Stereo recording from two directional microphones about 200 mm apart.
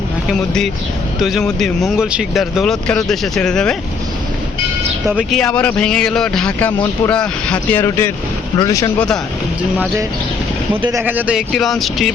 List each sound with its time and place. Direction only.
0.3 s speech: centre (ahead or behind)
5.0 s speech: centre (ahead or behind); by 8.9 s 20° left (ahead or behind)
10.8 s speech: 10° right (ahead or behind)